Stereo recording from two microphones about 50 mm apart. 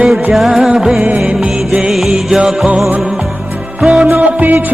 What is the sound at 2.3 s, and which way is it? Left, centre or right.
Music, centre.